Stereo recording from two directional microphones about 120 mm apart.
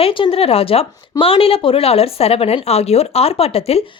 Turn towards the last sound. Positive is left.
turn(degrees=55)  # may be behind; listen again after turning